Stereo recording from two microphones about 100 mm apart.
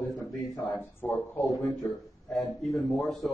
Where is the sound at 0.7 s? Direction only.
20° left (ahead or behind).